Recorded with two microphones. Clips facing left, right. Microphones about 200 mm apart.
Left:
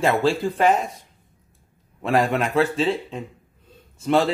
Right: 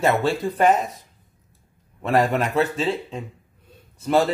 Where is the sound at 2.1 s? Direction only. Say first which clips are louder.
Even; 5° right (ahead or behind).